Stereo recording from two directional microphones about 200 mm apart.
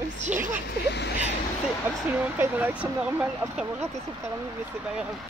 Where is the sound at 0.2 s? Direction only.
35° right (ahead or behind).